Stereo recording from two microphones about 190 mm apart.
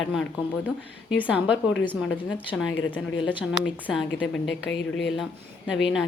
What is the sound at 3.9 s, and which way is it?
Speech, centre (ahead or behind).